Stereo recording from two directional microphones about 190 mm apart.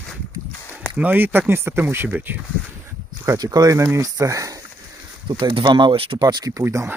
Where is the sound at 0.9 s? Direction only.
10° right (ahead or behind).